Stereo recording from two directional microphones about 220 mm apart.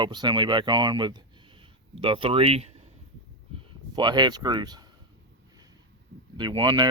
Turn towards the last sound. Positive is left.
turn(degrees=-20)  # may be behind; listen again after turning